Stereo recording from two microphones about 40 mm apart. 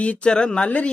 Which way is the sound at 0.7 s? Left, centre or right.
Left.